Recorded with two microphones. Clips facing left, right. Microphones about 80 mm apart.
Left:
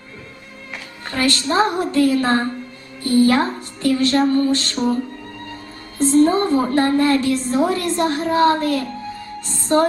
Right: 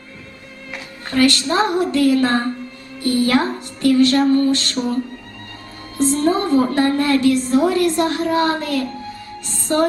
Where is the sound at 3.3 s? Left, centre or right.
Left.